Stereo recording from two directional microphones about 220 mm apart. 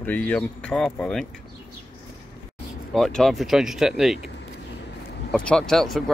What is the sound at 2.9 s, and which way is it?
Speech, centre (ahead or behind).